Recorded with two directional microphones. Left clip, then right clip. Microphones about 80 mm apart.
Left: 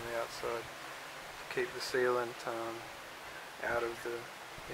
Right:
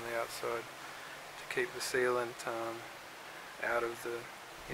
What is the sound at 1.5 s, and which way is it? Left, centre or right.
Speech, right.